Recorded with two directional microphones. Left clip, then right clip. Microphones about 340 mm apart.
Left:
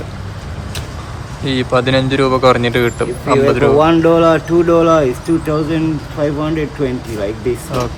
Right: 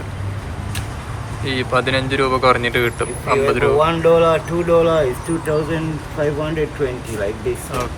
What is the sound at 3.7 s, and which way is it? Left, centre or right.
Speech, left.